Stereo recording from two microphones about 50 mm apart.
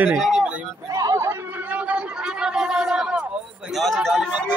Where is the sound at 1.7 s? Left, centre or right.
Right.